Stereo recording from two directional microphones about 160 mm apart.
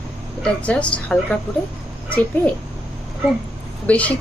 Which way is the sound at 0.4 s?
10° left (ahead or behind).